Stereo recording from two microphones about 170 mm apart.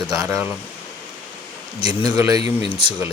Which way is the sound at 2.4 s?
35° left (ahead or behind).